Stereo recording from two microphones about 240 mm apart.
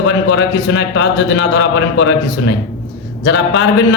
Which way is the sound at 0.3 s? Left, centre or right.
Left.